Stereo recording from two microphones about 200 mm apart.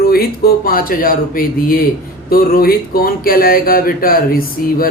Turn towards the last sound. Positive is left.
turn(degrees=45)  # may be behind; listen again after turning